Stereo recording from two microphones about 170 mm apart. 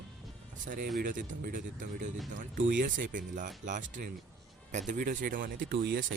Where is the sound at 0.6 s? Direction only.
50° right (ahead or behind).